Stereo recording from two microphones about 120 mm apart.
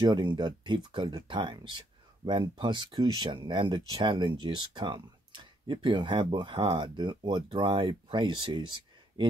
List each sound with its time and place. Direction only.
0.0 s speech: 40° right (ahead or behind)